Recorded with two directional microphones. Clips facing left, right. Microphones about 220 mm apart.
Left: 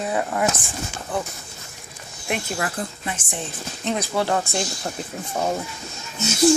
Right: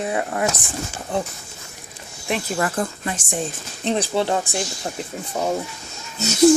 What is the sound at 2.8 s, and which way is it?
Speech, 40° right (ahead or behind).